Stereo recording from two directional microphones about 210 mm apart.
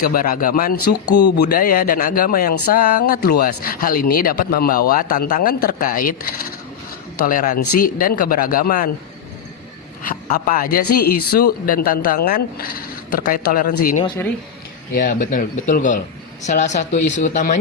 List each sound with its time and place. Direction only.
0.0 s a man's voice: 45° left (ahead or behind)
1.1 s speech: 55° left (ahead or behind)
1.5 s a man's voice: 40° left (ahead or behind)
7.3 s speech: 40° left (ahead or behind)
10.0 s a man's voice: 40° left (ahead or behind)